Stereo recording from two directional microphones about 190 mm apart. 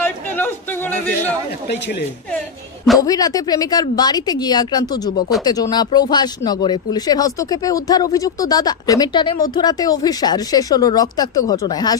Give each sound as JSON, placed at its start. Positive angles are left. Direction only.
{"t": 0.0, "sound": "chatter", "side_deg": 10}
{"t": 3.0, "sound": "speech", "side_deg": 20}